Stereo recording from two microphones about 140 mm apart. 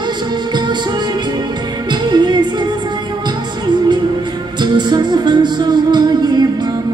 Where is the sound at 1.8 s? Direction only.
30° right (ahead or behind).